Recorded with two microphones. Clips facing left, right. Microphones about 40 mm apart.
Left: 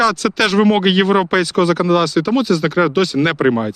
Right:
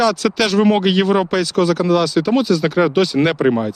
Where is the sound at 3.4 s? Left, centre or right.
Left.